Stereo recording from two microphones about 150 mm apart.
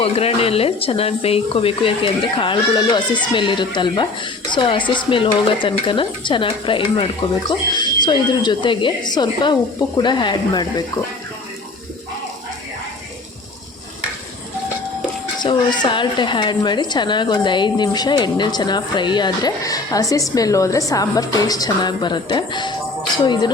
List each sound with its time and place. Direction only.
0.0 s a woman's voice: 40° left (ahead or behind)
15.4 s a woman's voice: 30° left (ahead or behind)